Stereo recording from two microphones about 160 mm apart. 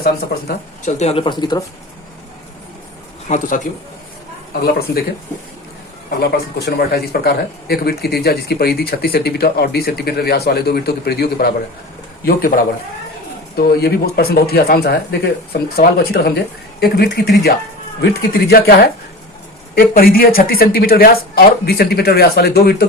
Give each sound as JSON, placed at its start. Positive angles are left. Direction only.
{"t": 0.0, "sound": "speech", "side_deg": 70}
{"t": 0.9, "sound": "speech", "side_deg": 40}
{"t": 3.2, "sound": "a man's voice", "side_deg": 50}
{"t": 4.6, "sound": "speech", "side_deg": 70}
{"t": 6.1, "sound": "speech", "side_deg": 80}
{"t": 12.2, "sound": "speech", "side_deg": 60}
{"t": 13.6, "sound": "speech", "side_deg": 70}